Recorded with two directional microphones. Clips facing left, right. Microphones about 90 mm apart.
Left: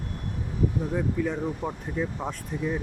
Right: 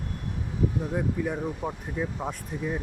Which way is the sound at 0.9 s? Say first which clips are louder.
Left 1 dB; 15° right (ahead or behind).